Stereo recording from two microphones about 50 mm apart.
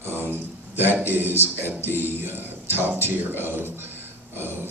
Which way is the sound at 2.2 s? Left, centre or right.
Right.